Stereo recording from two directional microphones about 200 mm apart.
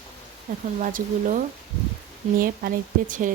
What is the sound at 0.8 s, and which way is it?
A woman's voice, 40° right (ahead or behind).